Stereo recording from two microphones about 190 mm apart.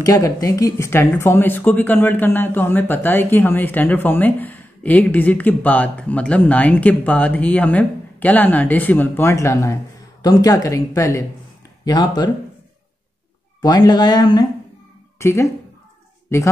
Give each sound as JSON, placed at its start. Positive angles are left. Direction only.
{"t": 0.0, "sound": "speech", "side_deg": 20}
{"t": 13.6, "sound": "speech", "side_deg": 20}